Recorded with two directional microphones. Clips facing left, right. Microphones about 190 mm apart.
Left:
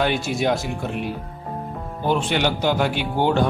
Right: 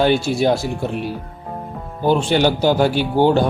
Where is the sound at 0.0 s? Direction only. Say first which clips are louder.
Right 5 dB; 30° right (ahead or behind).